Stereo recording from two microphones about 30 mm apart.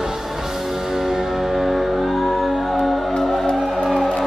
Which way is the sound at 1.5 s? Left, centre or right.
Centre.